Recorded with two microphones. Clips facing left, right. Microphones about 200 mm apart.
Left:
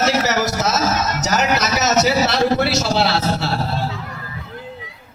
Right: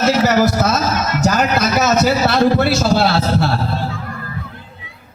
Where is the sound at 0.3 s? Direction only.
55° right (ahead or behind).